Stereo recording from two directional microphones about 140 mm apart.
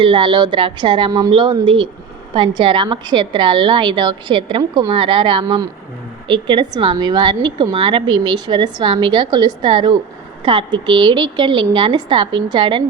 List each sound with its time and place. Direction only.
0.0 s a woman's voice: 35° right (ahead or behind)